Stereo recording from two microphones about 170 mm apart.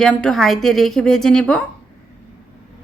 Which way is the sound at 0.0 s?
5° left (ahead or behind).